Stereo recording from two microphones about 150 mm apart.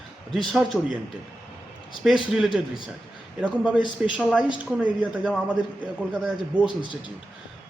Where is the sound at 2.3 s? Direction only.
5° right (ahead or behind).